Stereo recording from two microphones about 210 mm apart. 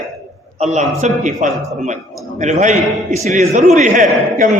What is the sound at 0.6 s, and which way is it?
A man's voice, 35° right (ahead or behind).